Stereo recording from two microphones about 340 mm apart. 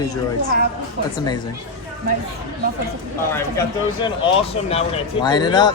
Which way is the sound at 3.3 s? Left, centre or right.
Centre.